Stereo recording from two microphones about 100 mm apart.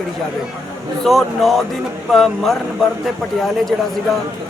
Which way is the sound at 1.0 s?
Centre (ahead or behind).